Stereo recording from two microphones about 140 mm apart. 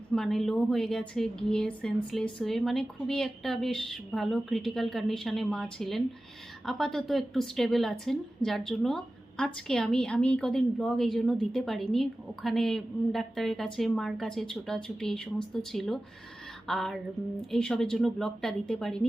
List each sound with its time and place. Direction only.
0.1 s a woman's voice: 5° left (ahead or behind)